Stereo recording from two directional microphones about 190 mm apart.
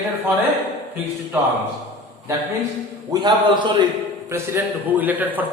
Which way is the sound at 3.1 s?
25° right (ahead or behind).